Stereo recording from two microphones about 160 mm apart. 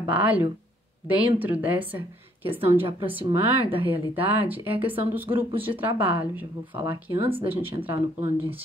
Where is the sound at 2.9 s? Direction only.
35° right (ahead or behind).